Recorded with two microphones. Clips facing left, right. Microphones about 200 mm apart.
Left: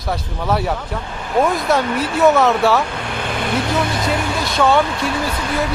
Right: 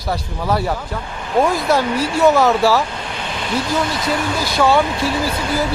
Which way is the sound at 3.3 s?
55° left (ahead or behind).